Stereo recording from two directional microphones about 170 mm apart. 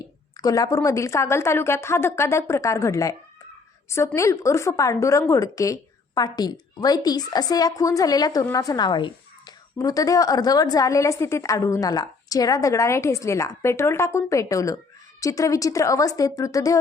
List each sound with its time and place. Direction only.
0.3 s a woman's voice: 20° left (ahead or behind)